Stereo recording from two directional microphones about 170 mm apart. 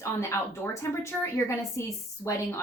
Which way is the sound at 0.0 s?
15° left (ahead or behind).